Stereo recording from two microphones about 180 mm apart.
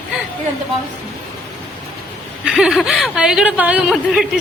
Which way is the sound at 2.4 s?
5° right (ahead or behind).